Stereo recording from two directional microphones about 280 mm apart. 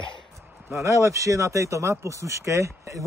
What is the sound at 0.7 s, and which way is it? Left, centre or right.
Speech, centre.